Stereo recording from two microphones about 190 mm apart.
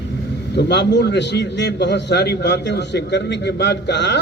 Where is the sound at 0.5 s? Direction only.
60° left (ahead or behind).